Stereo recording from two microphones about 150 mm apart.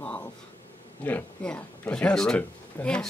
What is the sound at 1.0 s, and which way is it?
Speech, 10° left (ahead or behind).